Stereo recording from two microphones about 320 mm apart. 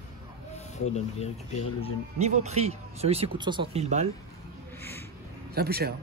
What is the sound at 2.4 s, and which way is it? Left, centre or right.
Speech, centre.